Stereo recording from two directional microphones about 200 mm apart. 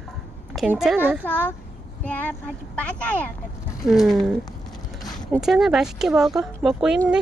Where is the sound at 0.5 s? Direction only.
5° right (ahead or behind).